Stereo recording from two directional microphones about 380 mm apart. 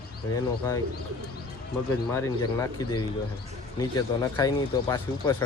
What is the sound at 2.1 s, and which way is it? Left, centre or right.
Speech, centre.